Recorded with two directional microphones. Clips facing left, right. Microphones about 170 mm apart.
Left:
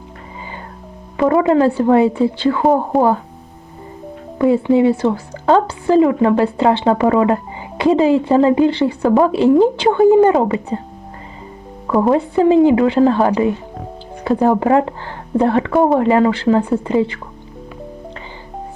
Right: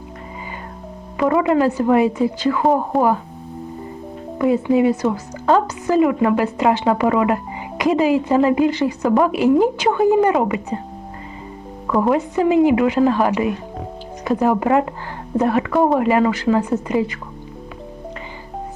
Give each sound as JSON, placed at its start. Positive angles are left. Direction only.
{"t": 1.1, "sound": "a woman's voice", "side_deg": 30}
{"t": 4.4, "sound": "a woman's voice", "side_deg": 25}
{"t": 11.9, "sound": "a woman's voice", "side_deg": 30}